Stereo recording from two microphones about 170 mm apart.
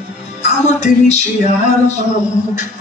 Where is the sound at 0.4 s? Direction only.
40° left (ahead or behind).